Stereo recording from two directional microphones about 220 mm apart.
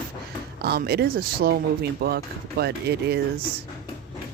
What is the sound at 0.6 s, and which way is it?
Speech, 45° right (ahead or behind).